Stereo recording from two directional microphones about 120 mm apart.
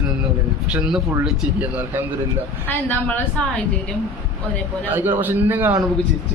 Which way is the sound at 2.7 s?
15° left (ahead or behind).